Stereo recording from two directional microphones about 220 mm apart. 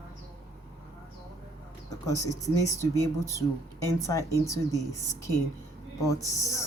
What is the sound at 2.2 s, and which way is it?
Speech, 15° left (ahead or behind).